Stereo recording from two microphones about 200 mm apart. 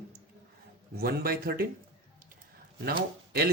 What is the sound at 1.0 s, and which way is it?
Speech, 50° right (ahead or behind).